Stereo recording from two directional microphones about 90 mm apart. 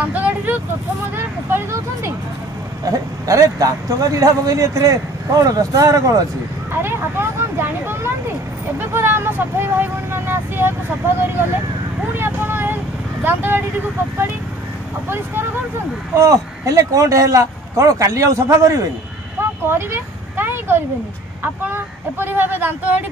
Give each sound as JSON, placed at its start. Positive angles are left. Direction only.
{"t": 0.0, "sound": "vehicle", "side_deg": -15}
{"t": 1.1, "sound": "speech", "side_deg": -30}
{"t": 2.8, "sound": "speech", "side_deg": -40}
{"t": 6.7, "sound": "speech", "side_deg": -25}
{"t": 12.2, "sound": "vehicle", "side_deg": -25}
{"t": 15.0, "sound": "speech", "side_deg": -25}
{"t": 16.2, "sound": "speech", "side_deg": -35}
{"t": 19.7, "sound": "a sound", "side_deg": -25}
{"t": 22.2, "sound": "speech", "side_deg": -25}